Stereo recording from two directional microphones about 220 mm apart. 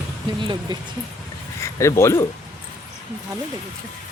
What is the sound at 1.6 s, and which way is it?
Speech, 15° left (ahead or behind).